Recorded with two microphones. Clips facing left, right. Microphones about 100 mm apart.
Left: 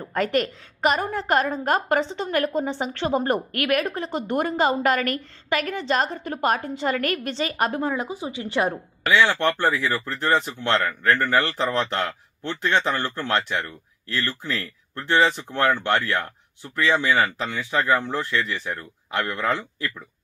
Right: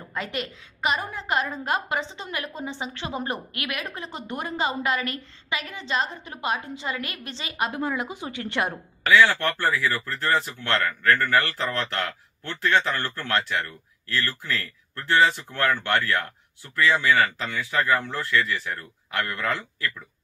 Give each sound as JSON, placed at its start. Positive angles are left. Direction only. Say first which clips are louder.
{"t": 0.1, "sound": "a woman's voice", "louder": "left 9 dB", "side_deg": 50}
{"t": 2.3, "sound": "a woman's voice", "louder": "left 9 dB", "side_deg": 50}
{"t": 7.8, "sound": "speech", "louder": "left 2 dB", "side_deg": 30}